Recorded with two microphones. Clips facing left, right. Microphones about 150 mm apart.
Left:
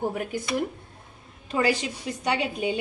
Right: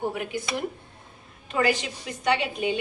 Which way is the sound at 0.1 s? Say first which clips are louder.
Left 1 dB; 40° left (ahead or behind).